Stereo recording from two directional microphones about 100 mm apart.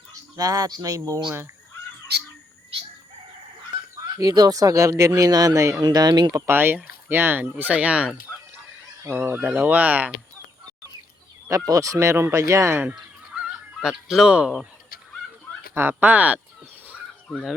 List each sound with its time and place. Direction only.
0.1 s speech: 35° right (ahead or behind)
4.0 s speech: 40° right (ahead or behind)
6.4 s speech: 20° right (ahead or behind)
11.4 s speech: 35° right (ahead or behind); by 13.4 s 15° right (ahead or behind)
13.4 s goose: 5° right (ahead or behind)
15.7 s speech: 20° right (ahead or behind)